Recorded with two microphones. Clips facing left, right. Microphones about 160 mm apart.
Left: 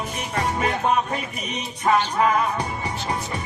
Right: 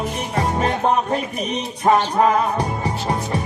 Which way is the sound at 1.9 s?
35° right (ahead or behind).